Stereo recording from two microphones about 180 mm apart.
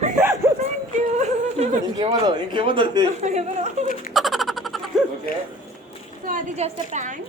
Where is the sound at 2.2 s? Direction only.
25° right (ahead or behind).